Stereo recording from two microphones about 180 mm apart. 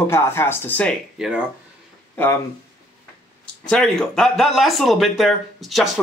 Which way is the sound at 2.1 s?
10° left (ahead or behind).